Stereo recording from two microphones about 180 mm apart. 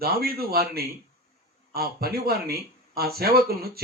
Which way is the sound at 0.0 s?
60° right (ahead or behind).